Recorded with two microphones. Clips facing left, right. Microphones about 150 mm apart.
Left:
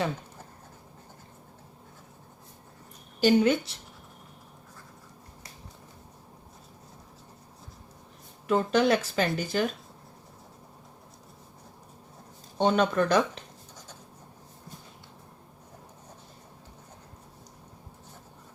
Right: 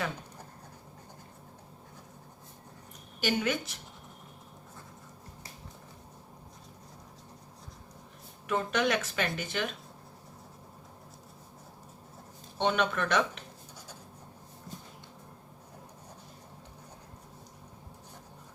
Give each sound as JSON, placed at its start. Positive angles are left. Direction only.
{"t": 3.2, "sound": "speech", "side_deg": 30}
{"t": 8.4, "sound": "speech", "side_deg": 30}
{"t": 12.5, "sound": "speech", "side_deg": 35}